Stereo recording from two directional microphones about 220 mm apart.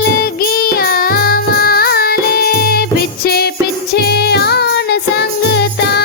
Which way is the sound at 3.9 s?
45° left (ahead or behind).